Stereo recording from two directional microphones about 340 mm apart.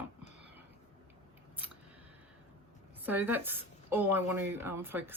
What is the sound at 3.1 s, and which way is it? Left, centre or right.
Speech, centre.